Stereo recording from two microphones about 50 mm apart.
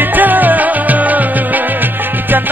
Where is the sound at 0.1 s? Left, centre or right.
Right.